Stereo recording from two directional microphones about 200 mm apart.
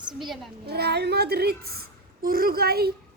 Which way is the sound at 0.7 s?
55° right (ahead or behind).